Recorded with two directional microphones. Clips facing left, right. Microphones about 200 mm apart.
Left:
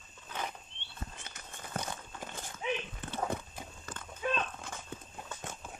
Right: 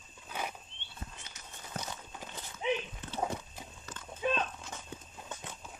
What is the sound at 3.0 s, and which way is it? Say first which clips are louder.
Horse: left 2 dB; 55° left (ahead or behind).